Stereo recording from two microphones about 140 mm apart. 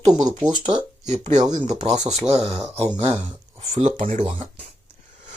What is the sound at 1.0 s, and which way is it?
Speech, 55° right (ahead or behind).